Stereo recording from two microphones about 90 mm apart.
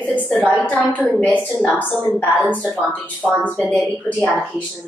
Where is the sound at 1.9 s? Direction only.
15° left (ahead or behind).